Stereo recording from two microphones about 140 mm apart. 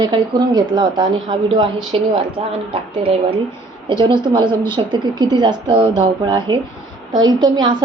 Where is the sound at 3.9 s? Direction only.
35° right (ahead or behind).